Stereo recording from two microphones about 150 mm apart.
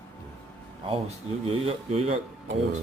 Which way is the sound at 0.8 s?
40° right (ahead or behind).